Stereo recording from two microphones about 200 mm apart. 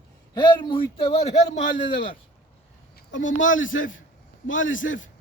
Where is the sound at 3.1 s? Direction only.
70° left (ahead or behind).